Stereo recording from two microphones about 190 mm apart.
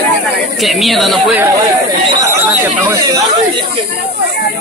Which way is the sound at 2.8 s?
15° right (ahead or behind).